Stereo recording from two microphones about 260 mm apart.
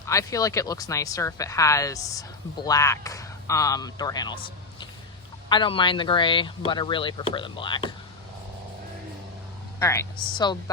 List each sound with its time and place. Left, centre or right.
0.0 s speech: centre
5.5 s speech: centre
9.8 s speech: centre